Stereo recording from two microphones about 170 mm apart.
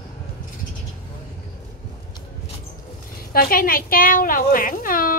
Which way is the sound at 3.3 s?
60° left (ahead or behind).